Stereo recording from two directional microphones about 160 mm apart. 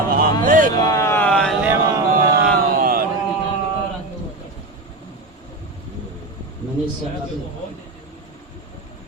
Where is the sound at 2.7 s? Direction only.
65° right (ahead or behind).